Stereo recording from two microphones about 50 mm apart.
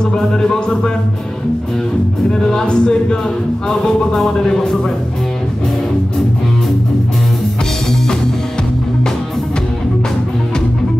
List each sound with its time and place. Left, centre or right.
0.0 s music: centre
2.4 s speech: centre